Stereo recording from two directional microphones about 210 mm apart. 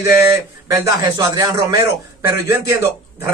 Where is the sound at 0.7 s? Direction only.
15° right (ahead or behind).